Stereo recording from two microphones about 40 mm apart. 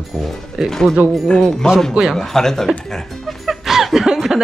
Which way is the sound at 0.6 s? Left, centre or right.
Centre.